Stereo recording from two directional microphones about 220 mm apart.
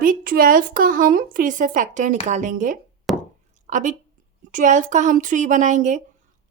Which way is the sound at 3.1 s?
Centre (ahead or behind).